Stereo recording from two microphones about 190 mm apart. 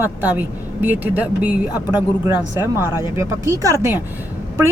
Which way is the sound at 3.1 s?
15° right (ahead or behind).